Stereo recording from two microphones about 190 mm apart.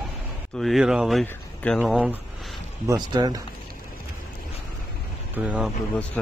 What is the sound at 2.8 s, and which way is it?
Speech, 20° right (ahead or behind).